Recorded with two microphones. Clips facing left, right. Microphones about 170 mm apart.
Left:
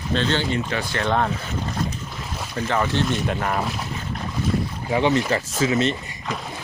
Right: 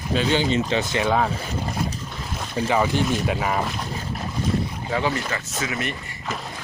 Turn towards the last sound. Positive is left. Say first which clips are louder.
# left 7 dB
turn(degrees=25)  # may be behind; listen again after turning